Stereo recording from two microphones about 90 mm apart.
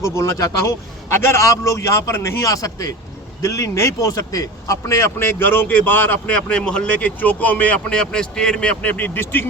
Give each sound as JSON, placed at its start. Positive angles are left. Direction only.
{"t": 0.0, "sound": "a man's voice", "side_deg": 30}